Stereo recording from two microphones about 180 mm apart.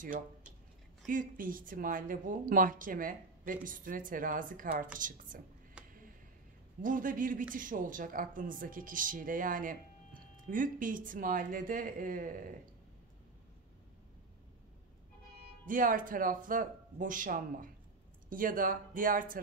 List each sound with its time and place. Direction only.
1.0 s speech: 50° right (ahead or behind)
5.8 s a sound: 5° right (ahead or behind)
6.8 s speech: 50° right (ahead or behind)
15.6 s speech: 50° right (ahead or behind)